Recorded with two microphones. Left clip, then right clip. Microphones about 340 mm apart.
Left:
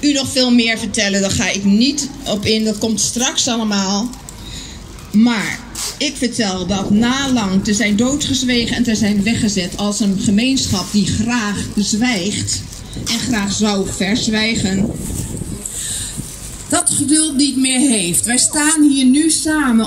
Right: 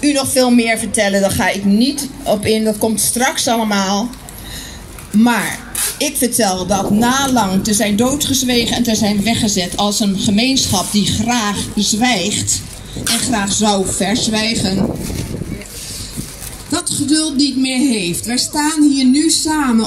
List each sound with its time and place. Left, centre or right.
0.0 s speech: centre
5.9 s a woman's voice: centre
16.9 s speech: centre
17.6 s a woman's voice: centre